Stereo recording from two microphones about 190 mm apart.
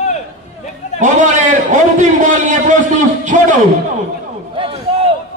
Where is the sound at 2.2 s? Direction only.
40° right (ahead or behind).